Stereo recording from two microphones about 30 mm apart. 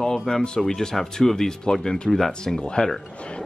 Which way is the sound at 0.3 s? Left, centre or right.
Left.